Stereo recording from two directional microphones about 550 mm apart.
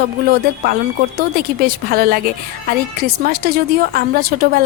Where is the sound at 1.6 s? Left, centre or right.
Centre.